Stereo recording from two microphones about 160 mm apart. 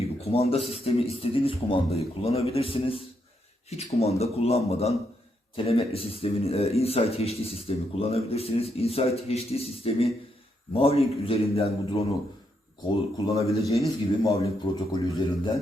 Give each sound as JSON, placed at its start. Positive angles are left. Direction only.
{"t": 0.0, "sound": "a sound", "side_deg": 40}
{"t": 0.7, "sound": "a man's voice", "side_deg": 40}
{"t": 12.9, "sound": "speech", "side_deg": 20}